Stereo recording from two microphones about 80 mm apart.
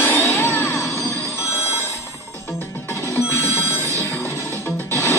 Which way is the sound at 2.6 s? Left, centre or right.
Left.